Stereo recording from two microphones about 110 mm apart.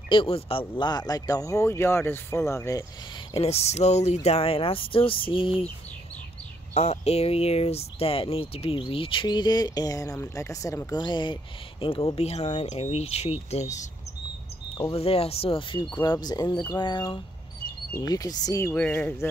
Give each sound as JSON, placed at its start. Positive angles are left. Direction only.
{"t": 0.1, "sound": "speech", "side_deg": 55}
{"t": 3.3, "sound": "speech", "side_deg": 70}
{"t": 6.7, "sound": "speech", "side_deg": 75}
{"t": 11.0, "sound": "speech", "side_deg": 45}
{"t": 11.8, "sound": "speech", "side_deg": 55}
{"t": 14.8, "sound": "speech", "side_deg": 60}
{"t": 18.8, "sound": "speech", "side_deg": 20}